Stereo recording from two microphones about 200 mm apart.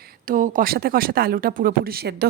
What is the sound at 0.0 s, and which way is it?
Speech, 45° right (ahead or behind).